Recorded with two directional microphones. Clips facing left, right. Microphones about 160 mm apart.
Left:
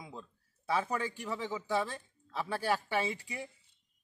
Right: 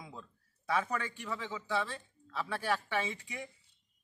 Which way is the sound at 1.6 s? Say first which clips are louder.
Left 1 dB; 40° left (ahead or behind).